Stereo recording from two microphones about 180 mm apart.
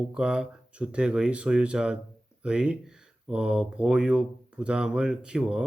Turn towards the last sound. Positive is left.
turn(degrees=-5)  # may be behind; listen again after turning